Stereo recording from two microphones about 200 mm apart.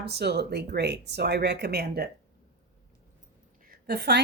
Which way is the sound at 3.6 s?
50° right (ahead or behind).